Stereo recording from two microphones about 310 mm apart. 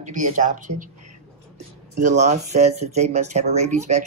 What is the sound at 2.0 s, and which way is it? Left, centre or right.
Speech, right.